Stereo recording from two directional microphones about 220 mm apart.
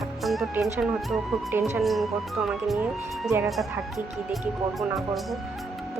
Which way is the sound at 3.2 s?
10° right (ahead or behind).